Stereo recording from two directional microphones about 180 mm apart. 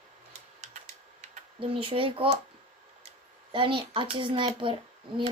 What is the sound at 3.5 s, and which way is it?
A woman's voice, 30° right (ahead or behind).